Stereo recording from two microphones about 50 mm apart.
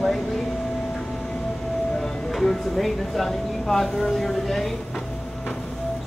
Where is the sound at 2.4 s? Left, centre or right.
Centre.